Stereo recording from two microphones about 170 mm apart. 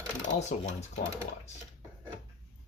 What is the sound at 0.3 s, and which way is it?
Speech, 40° left (ahead or behind).